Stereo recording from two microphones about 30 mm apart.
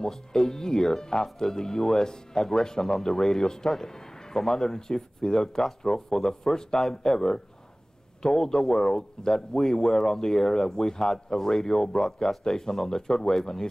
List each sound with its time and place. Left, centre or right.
0.0 s speech: centre